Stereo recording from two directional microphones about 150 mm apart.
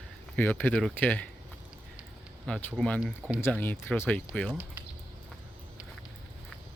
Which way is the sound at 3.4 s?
15° left (ahead or behind).